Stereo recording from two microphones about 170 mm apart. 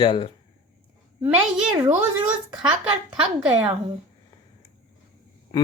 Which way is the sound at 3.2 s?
30° right (ahead or behind).